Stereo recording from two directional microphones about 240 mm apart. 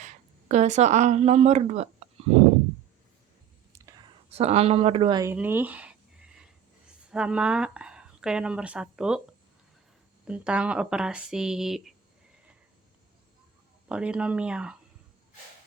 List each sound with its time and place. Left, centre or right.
0.0 s speech: right
3.7 s whispering: centre
4.3 s speech: right; by 9.2 s centre
10.2 s speech: centre
13.8 s speech: centre